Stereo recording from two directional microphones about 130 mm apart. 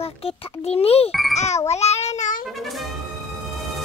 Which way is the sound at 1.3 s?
60° left (ahead or behind).